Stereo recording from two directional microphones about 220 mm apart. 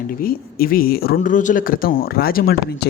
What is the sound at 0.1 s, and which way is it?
Speech, 40° left (ahead or behind).